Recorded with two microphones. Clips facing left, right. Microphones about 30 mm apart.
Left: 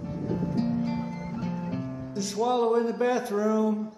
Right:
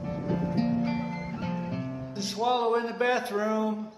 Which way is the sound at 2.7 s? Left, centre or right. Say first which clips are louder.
Left 2 dB; right.